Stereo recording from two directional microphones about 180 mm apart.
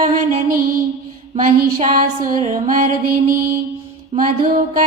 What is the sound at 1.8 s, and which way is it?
Music, 40° right (ahead or behind).